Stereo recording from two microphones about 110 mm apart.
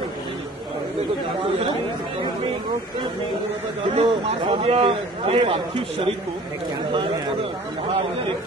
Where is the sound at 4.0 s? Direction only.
60° right (ahead or behind).